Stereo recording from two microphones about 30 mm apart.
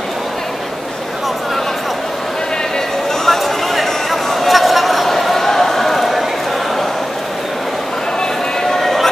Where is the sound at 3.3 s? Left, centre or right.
Centre.